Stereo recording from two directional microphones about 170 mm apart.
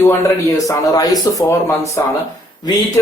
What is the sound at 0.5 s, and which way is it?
Speech, 20° left (ahead or behind).